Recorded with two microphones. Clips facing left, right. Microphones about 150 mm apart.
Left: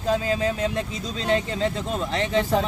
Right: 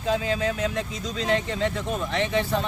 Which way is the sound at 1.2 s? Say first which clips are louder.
Left 1 dB; 30° left (ahead or behind).